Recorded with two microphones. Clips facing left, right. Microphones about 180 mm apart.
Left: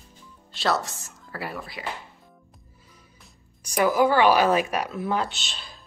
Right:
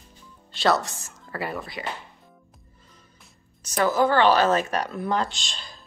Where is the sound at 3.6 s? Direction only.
10° left (ahead or behind).